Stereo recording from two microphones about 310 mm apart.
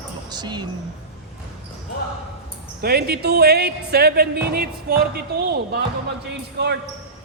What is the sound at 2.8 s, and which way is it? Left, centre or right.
Speech, right.